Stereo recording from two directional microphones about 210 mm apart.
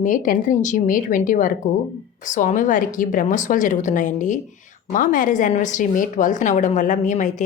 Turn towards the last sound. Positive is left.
turn(degrees=35)  # may be behind; listen again after turning